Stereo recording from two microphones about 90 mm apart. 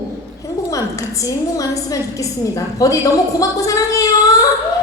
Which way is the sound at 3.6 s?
40° left (ahead or behind).